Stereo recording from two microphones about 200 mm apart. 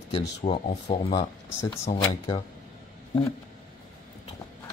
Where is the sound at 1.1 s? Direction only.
20° left (ahead or behind).